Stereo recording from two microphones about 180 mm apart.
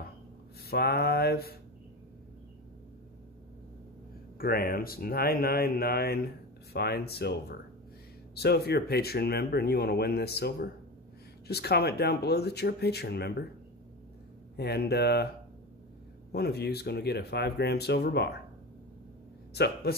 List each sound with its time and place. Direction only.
0.7 s speech: 60° left (ahead or behind)
4.4 s speech: 55° left (ahead or behind)
14.6 s speech: 65° left (ahead or behind)
16.3 s speech: 65° left (ahead or behind)
19.5 s speech: 65° left (ahead or behind)